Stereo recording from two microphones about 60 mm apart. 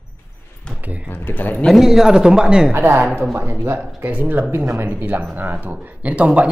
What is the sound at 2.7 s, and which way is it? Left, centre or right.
Speech, right.